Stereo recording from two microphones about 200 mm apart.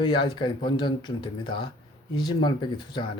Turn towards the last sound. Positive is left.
turn(degrees=25)  # may be behind; listen again after turning